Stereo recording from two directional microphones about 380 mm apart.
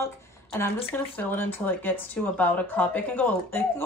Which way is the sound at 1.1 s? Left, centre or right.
Centre.